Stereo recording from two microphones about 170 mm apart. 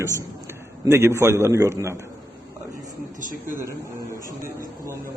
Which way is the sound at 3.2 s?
50° right (ahead or behind).